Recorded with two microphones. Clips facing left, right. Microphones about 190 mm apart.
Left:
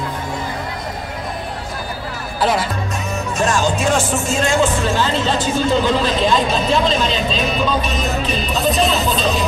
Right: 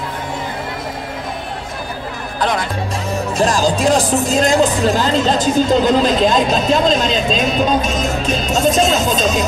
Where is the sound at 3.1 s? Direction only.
35° right (ahead or behind).